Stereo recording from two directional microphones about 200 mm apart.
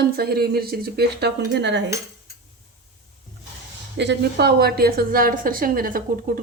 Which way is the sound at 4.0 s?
55° right (ahead or behind).